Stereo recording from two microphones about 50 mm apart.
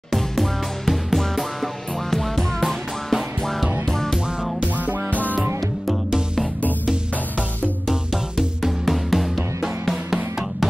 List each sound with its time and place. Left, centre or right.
0.1 s music: centre
5.1 s music: left
5.9 s music: centre
8.1 s music: centre